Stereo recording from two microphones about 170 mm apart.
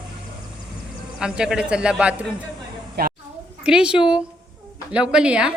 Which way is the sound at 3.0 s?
70° right (ahead or behind).